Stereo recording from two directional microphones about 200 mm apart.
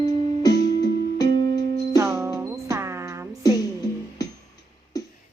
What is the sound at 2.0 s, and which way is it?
Music, 15° right (ahead or behind).